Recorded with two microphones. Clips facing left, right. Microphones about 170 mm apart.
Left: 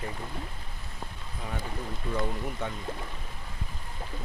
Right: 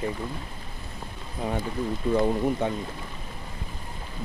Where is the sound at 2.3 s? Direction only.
30° right (ahead or behind).